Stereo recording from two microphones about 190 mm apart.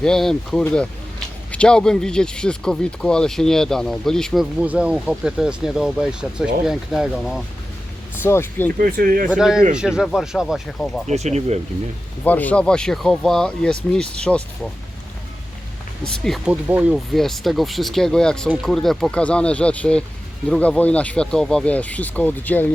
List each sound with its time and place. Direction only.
0.0 s speech: centre (ahead or behind)
8.2 s speech: 10° left (ahead or behind)
8.8 s speech: 50° right (ahead or behind)
9.3 s speech: 5° right (ahead or behind)
11.1 s speech: 35° right (ahead or behind)
12.2 s speech: 10° left (ahead or behind)
16.0 s speech: centre (ahead or behind)